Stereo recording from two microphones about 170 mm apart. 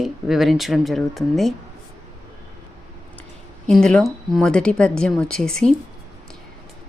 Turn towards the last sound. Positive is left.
turn(degrees=5)  # may be behind; listen again after turning